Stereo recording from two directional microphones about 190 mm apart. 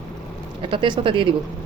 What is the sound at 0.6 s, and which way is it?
Speech, 25° right (ahead or behind).